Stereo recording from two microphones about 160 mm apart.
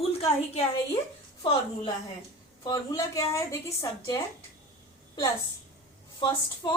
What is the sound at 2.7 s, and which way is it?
A woman's voice, 20° left (ahead or behind).